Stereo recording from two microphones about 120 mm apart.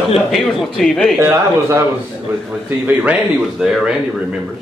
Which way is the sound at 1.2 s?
20° right (ahead or behind).